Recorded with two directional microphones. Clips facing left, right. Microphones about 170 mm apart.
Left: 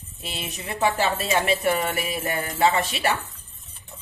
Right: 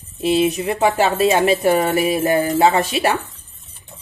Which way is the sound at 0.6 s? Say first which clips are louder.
Right 7 dB; 25° right (ahead or behind).